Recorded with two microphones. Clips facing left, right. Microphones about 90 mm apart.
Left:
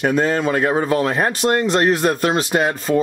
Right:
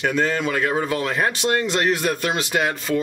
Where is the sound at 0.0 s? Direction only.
40° left (ahead or behind).